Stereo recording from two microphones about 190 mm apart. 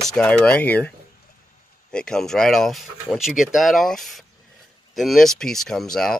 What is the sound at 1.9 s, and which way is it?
Speech, 5° left (ahead or behind).